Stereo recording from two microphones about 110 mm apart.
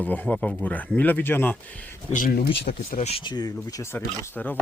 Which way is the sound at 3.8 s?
25° left (ahead or behind).